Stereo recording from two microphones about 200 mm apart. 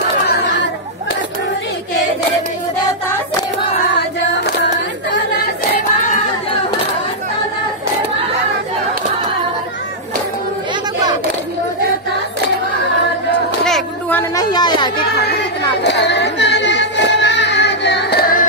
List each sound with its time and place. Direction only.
0.3 s children playing: 60° left (ahead or behind)
13.7 s a sound: 5° left (ahead or behind); by 15.0 s 20° left (ahead or behind)
15.8 s music: 60° left (ahead or behind)